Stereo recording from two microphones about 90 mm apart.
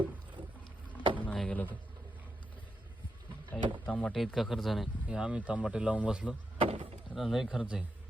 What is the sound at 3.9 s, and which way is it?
Speech, 15° left (ahead or behind).